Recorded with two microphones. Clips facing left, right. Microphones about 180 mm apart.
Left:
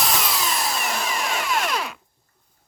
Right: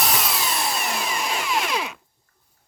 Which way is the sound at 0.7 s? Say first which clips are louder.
Even; centre (ahead or behind).